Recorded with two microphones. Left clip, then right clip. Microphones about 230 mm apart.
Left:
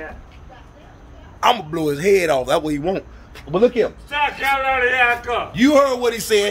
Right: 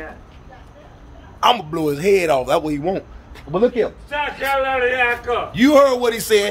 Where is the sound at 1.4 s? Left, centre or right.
Centre.